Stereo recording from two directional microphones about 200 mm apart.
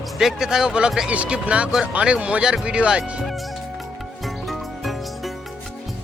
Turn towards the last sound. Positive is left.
turn(degrees=0)  # may be behind; listen again after turning